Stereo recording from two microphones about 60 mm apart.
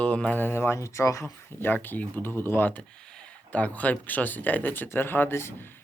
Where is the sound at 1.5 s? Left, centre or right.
Left.